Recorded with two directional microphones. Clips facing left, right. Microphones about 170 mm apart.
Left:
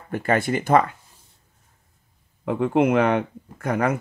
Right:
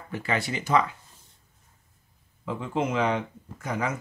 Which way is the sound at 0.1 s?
50° left (ahead or behind).